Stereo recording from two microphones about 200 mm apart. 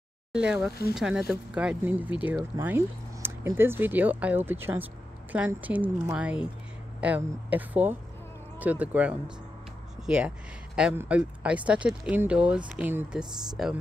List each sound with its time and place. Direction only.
0.3 s speech: 5° right (ahead or behind)